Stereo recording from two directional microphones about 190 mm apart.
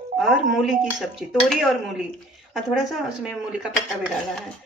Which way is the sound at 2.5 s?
Centre (ahead or behind).